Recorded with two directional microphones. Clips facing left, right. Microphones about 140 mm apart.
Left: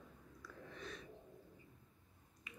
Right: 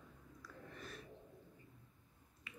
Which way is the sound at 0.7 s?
5° right (ahead or behind).